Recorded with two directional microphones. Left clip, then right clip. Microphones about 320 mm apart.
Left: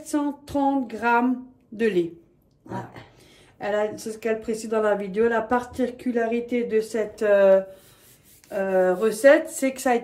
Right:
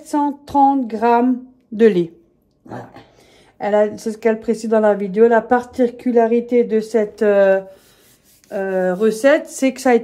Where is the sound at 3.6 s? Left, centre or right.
Right.